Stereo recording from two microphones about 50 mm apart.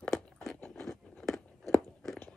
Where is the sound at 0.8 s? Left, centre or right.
Centre.